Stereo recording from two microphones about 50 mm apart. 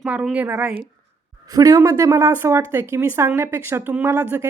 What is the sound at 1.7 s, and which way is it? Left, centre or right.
Speech, right.